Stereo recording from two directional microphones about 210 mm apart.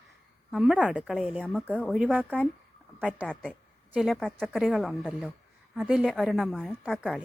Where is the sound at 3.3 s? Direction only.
5° left (ahead or behind).